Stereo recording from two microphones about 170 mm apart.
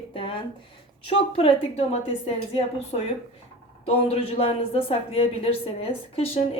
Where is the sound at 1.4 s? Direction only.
35° left (ahead or behind).